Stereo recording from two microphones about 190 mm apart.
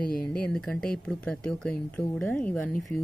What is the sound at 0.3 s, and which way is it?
A woman's voice, 5° left (ahead or behind).